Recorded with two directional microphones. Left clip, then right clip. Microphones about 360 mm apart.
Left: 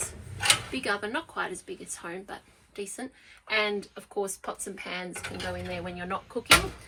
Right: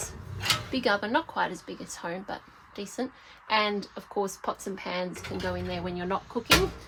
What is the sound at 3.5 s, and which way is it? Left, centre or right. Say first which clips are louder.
A woman's voice: right 1 dB; right.